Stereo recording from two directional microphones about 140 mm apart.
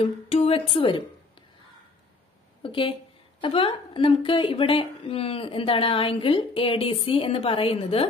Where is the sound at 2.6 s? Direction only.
40° left (ahead or behind).